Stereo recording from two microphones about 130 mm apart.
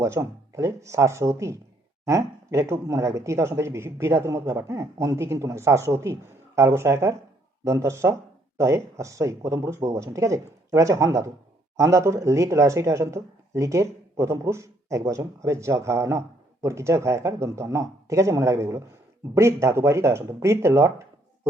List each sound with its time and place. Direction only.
0.0 s speech: 25° right (ahead or behind)